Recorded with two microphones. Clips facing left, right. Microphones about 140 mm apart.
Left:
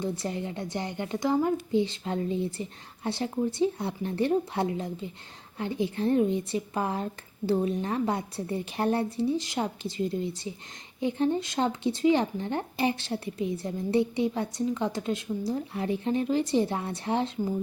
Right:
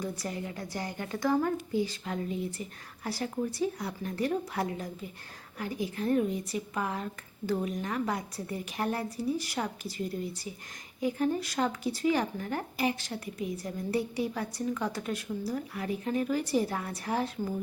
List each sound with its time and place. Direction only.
0.0 s speech: 25° left (ahead or behind)